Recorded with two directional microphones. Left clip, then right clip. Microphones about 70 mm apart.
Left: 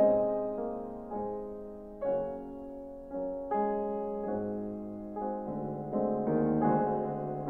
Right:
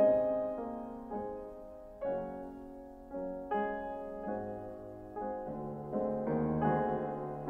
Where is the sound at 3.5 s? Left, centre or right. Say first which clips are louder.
Left 4 dB; right.